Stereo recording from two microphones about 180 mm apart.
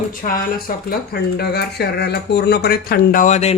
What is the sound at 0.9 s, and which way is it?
Speech, 65° left (ahead or behind).